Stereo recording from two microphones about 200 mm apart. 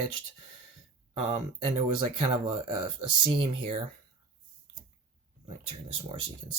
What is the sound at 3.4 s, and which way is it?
Speech, 30° right (ahead or behind).